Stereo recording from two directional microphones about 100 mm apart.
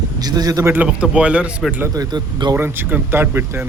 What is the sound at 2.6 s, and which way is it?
Speech, 20° right (ahead or behind).